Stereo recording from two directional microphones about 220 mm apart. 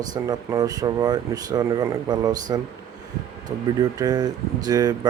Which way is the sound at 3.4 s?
15° right (ahead or behind).